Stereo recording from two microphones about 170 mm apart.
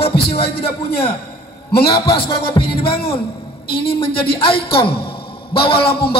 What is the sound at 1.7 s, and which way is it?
Speech, 65° left (ahead or behind).